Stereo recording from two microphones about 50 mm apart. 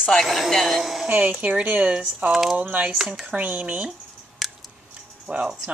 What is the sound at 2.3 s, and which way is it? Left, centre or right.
Speech, centre.